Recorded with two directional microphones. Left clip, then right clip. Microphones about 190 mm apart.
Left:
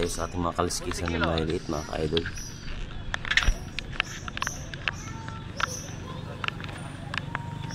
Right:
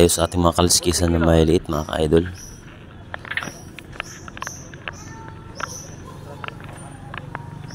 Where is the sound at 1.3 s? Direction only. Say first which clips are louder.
Right 11 dB; 40° right (ahead or behind).